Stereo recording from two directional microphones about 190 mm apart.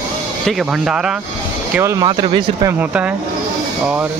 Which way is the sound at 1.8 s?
15° right (ahead or behind).